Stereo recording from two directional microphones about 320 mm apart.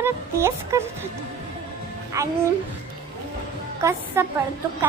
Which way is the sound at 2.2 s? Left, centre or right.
Centre.